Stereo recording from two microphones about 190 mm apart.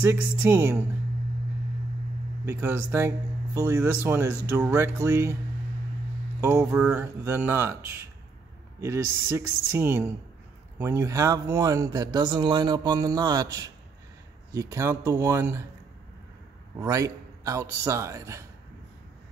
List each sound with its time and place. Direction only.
0.0 s speech: 10° right (ahead or behind)
2.4 s speech: 15° right (ahead or behind)
6.4 s speech: 10° right (ahead or behind)
16.7 s speech: 15° right (ahead or behind)